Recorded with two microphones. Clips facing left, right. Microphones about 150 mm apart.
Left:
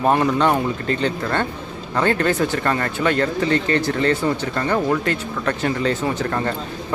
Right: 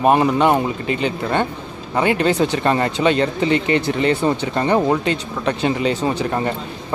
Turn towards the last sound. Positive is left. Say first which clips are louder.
# right 1 dB
turn(degrees=-20)  # may be behind; listen again after turning